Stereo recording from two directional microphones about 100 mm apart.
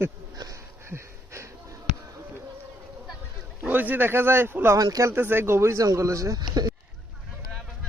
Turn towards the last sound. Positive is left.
turn(degrees=-40)  # may be behind; listen again after turning